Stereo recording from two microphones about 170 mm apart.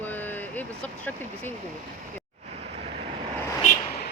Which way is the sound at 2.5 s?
40° right (ahead or behind).